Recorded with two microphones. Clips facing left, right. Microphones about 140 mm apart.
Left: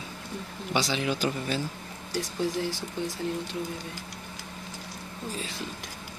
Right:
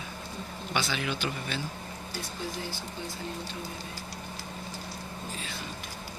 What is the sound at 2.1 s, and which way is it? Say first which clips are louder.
Speech: left 9 dB; 90° left.